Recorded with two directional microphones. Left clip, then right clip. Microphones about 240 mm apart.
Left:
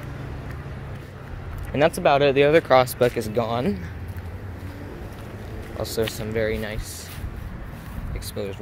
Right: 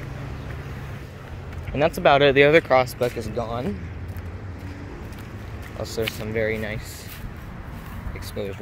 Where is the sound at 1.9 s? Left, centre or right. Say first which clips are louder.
Right 5 dB; centre.